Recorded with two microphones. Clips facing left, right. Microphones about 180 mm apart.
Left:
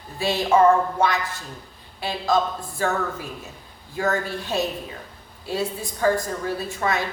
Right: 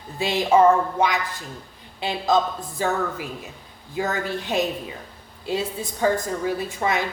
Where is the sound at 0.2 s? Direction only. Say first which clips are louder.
Right 1 dB; 20° right (ahead or behind).